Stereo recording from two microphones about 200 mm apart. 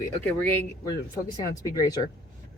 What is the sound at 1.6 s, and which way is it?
Speech, 15° left (ahead or behind).